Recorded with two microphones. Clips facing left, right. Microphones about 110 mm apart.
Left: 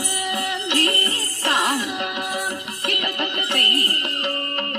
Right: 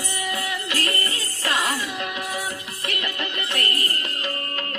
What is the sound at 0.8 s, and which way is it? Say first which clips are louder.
Music: left 4 dB; 35° left (ahead or behind).